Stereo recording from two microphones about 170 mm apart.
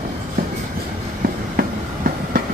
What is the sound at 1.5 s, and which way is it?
Train, 60° right (ahead or behind).